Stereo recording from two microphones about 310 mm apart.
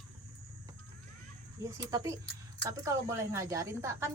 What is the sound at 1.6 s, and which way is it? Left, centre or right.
A woman's voice, centre.